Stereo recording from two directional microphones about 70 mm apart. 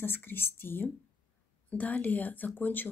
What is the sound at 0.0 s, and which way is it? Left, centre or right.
Speech, left.